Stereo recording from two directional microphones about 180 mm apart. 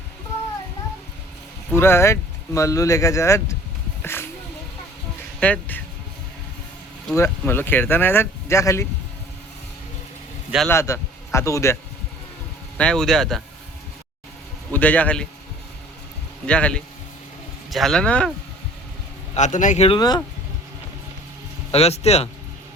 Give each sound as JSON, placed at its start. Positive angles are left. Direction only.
{"t": 1.7, "sound": "speech", "side_deg": 15}
{"t": 4.0, "sound": "a sound", "side_deg": 15}
{"t": 5.4, "sound": "speech", "side_deg": 10}
{"t": 7.2, "sound": "speech", "side_deg": 10}
{"t": 10.7, "sound": "a man's voice", "side_deg": 15}
{"t": 12.7, "sound": "speech", "side_deg": 5}
{"t": 14.7, "sound": "speech", "side_deg": 10}
{"t": 16.5, "sound": "speech", "side_deg": 5}
{"t": 19.3, "sound": "a man's voice", "side_deg": 45}
{"t": 20.0, "sound": "speech", "side_deg": 20}
{"t": 21.7, "sound": "a man's voice", "side_deg": 35}